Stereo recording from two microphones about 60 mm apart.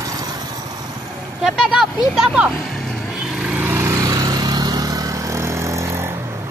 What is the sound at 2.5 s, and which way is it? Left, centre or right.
Vehicle, centre.